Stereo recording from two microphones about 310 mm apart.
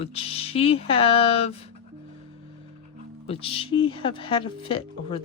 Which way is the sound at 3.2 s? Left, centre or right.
Centre.